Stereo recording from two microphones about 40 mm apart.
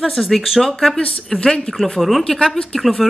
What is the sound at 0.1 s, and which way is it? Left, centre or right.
Speech, centre.